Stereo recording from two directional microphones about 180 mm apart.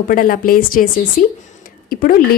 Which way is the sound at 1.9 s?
55° left (ahead or behind).